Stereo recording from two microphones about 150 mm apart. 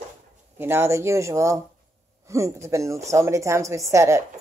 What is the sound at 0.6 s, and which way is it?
A woman's voice, 15° right (ahead or behind).